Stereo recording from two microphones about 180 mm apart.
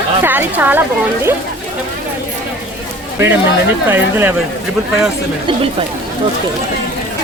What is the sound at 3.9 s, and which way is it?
Speech, 10° right (ahead or behind).